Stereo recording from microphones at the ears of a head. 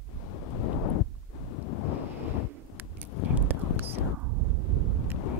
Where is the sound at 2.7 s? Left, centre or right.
Left.